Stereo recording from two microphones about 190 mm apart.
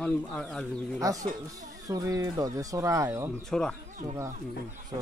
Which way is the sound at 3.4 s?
5° left (ahead or behind).